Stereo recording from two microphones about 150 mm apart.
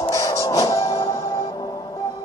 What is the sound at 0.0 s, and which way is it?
Music, 20° left (ahead or behind).